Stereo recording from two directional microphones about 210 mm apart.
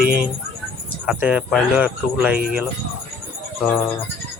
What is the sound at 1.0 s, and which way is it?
Speech, 5° right (ahead or behind).